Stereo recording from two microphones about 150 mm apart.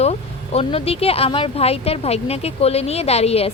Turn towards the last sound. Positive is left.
turn(degrees=45)  # may be behind; listen again after turning